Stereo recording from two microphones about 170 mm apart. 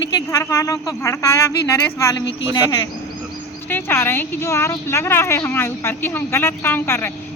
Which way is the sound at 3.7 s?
10° left (ahead or behind).